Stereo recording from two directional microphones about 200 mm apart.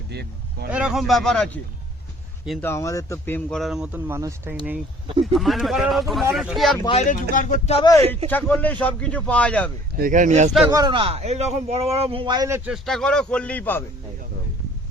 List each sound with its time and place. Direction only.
0.1 s speech: 55° right (ahead or behind)
0.7 s speech: 5° right (ahead or behind)
2.6 s speech: 15° left (ahead or behind)
6.8 s speech: 35° left (ahead or behind)
8.3 s speech: 10° left (ahead or behind)
10.0 s speech: 40° right (ahead or behind)
10.7 s a man's voice: 20° right (ahead or behind); by 13.8 s 10° left (ahead or behind)